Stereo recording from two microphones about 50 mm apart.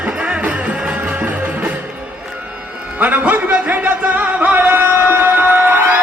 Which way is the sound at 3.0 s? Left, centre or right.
Right.